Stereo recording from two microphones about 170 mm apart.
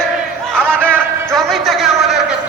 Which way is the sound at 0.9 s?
5° left (ahead or behind).